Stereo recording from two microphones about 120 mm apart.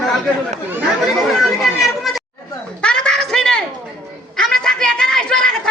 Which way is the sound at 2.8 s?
10° left (ahead or behind).